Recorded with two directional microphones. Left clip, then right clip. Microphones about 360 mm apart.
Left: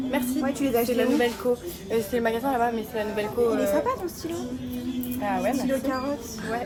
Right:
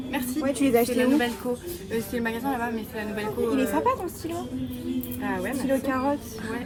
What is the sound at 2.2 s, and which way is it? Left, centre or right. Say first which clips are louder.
Speech: left 3 dB; centre.